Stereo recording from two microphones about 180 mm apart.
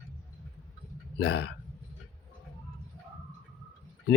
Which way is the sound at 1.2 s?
60° left (ahead or behind).